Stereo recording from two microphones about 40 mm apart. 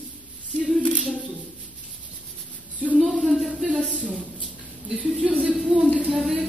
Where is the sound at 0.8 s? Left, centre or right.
Left.